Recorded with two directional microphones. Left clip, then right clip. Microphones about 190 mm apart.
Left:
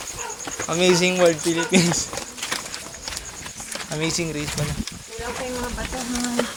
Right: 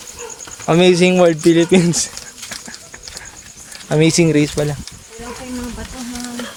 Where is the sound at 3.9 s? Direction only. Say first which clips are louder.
Right 13 dB; 45° right (ahead or behind).